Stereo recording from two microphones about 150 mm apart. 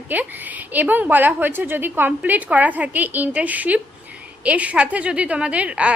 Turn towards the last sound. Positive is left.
turn(degrees=-10)  # may be behind; listen again after turning